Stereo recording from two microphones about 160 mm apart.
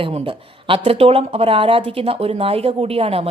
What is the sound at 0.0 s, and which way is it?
Speech, 35° right (ahead or behind).